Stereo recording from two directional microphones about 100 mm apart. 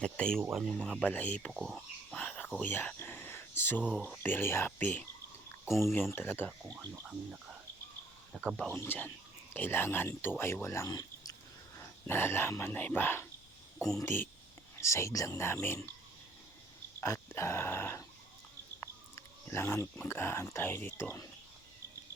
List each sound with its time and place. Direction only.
0.0 s speech: 10° left (ahead or behind)
2.0 s cricket: 10° left (ahead or behind)
2.6 s a sound: 15° left (ahead or behind)
4.2 s speech: 20° left (ahead or behind)
8.3 s speech: 5° right (ahead or behind)
8.7 s speech: 20° left (ahead or behind); by 11.3 s 40° left (ahead or behind)
11.8 s speech: 25° left (ahead or behind)
17.0 s speech: 25° left (ahead or behind)
18.8 s a sound: 25° left (ahead or behind)
20.1 s speech: 25° left (ahead or behind)